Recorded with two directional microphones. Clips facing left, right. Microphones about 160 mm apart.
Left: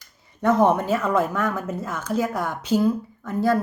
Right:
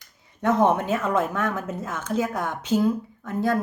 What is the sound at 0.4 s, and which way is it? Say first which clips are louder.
Speech: left 2 dB; 20° right (ahead or behind).